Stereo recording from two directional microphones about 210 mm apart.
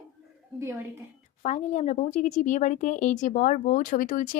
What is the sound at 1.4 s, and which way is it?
Speech, 35° left (ahead or behind).